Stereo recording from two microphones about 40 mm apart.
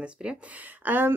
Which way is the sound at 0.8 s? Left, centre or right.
Right.